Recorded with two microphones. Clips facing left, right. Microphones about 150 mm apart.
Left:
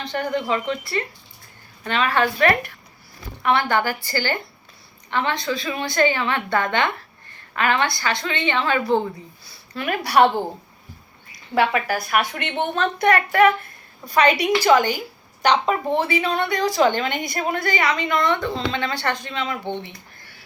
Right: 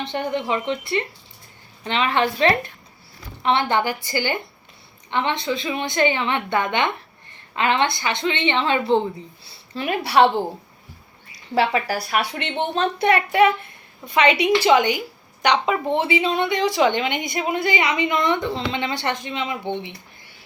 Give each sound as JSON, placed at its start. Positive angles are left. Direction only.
{"t": 0.0, "sound": "a woman's voice", "side_deg": -25}
{"t": 11.5, "sound": "a woman's voice", "side_deg": -30}
{"t": 15.9, "sound": "a woman's voice", "side_deg": -20}
{"t": 16.5, "sound": "a woman's voice", "side_deg": 40}
{"t": 17.3, "sound": "a woman's voice", "side_deg": -15}